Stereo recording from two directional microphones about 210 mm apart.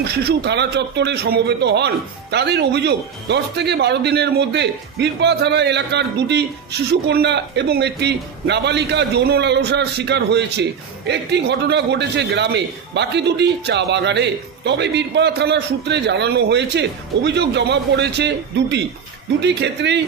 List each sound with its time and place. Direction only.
0.0 s a man's voice: 50° right (ahead or behind)